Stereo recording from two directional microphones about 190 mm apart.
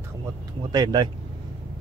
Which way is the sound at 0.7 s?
20° right (ahead or behind).